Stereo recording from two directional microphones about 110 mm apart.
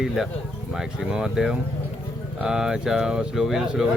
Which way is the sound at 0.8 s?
5° right (ahead or behind).